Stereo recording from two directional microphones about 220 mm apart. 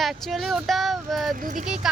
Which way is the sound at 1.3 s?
35° right (ahead or behind).